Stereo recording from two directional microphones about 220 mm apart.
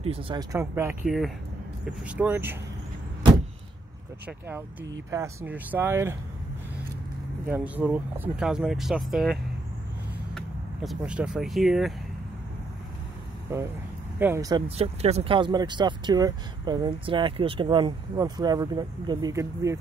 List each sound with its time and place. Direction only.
0.0 s speech: 25° right (ahead or behind); by 2.5 s 10° right (ahead or behind)
4.3 s speech: 10° right (ahead or behind)
7.4 s speech: 10° right (ahead or behind)
10.3 s vehicle: centre (ahead or behind)
11.0 s speech: 5° right (ahead or behind)
14.2 s speech: 15° right (ahead or behind)
14.8 s speech: 30° right (ahead or behind); by 19.8 s 15° right (ahead or behind)